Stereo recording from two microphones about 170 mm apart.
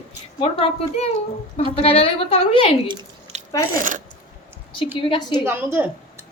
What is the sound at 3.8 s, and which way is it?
Speech, 50° right (ahead or behind).